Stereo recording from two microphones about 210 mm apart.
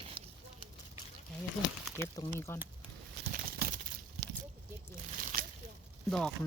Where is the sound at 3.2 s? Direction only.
55° right (ahead or behind).